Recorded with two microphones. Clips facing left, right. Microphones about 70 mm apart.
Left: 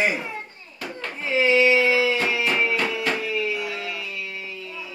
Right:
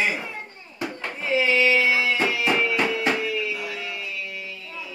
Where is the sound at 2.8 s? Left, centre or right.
Right.